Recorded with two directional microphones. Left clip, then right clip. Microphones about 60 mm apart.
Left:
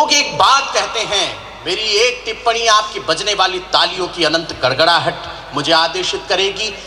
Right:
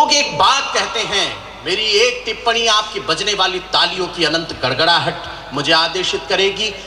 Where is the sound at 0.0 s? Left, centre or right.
Left.